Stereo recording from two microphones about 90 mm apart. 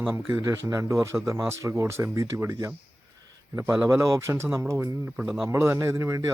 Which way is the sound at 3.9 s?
35° right (ahead or behind).